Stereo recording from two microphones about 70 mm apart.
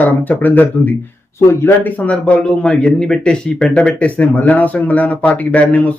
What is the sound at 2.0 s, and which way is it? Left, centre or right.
Speech, centre.